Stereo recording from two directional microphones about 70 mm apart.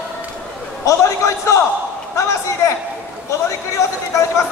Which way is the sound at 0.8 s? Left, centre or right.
Left.